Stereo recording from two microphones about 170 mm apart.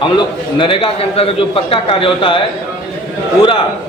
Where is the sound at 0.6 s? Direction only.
30° left (ahead or behind).